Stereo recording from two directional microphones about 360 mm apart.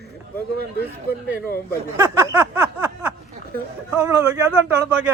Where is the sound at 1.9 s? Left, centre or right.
Centre.